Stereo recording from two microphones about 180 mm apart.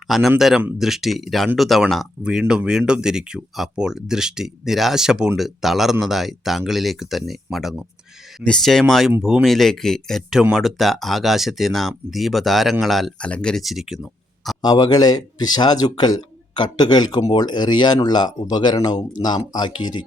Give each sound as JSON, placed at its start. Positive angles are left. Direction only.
{"t": 0.1, "sound": "speech", "side_deg": 0}
{"t": 14.6, "sound": "speech", "side_deg": 20}